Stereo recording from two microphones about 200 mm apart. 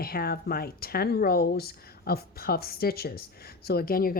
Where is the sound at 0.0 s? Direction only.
50° left (ahead or behind).